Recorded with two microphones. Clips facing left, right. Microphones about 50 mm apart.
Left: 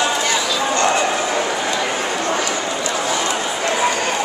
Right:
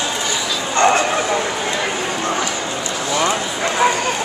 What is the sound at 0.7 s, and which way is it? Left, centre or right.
Bow-wow, right.